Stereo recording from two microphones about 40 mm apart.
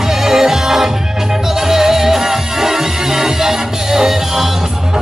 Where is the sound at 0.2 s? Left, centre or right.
Centre.